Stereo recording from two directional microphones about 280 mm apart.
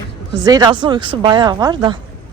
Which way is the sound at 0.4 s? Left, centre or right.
Centre.